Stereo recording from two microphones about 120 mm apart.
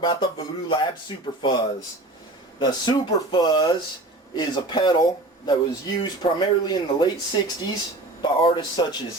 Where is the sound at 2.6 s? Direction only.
35° left (ahead or behind).